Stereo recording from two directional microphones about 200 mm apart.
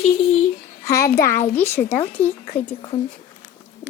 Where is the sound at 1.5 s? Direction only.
10° left (ahead or behind).